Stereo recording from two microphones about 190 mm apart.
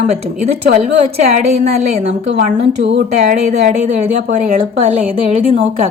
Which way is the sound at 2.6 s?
70° right (ahead or behind).